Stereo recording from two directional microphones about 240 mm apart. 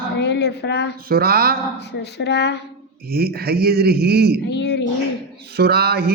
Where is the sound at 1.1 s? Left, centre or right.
Right.